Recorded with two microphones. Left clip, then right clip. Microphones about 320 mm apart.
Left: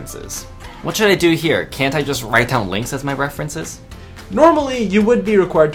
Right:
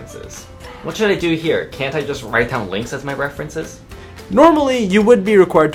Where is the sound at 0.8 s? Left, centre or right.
Left.